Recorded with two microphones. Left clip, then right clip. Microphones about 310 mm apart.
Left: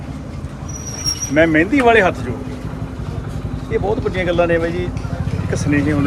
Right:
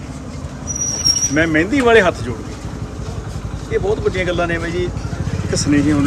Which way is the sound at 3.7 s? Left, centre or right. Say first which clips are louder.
Right 1 dB; centre.